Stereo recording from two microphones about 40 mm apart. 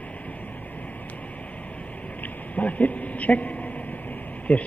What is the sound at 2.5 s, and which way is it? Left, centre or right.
Speech, left.